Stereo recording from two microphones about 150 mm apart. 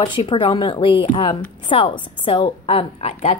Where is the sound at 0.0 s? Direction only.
35° left (ahead or behind).